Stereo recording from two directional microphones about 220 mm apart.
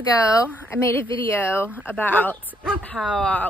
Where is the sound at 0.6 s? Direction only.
10° left (ahead or behind).